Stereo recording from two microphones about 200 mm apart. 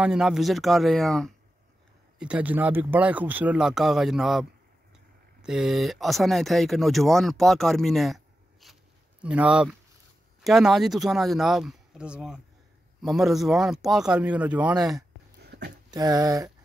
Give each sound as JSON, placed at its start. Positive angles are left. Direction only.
{"t": 0.0, "sound": "speech", "side_deg": -5}
{"t": 15.4, "sound": "a sound", "side_deg": -55}
{"t": 15.9, "sound": "speech", "side_deg": -20}